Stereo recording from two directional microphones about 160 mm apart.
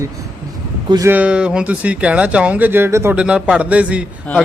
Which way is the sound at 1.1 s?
10° right (ahead or behind).